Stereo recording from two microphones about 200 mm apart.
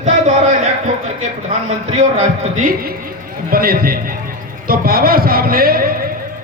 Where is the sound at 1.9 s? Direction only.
35° right (ahead or behind).